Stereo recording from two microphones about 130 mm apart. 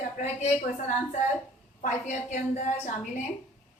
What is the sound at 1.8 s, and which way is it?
Speech, 65° left (ahead or behind).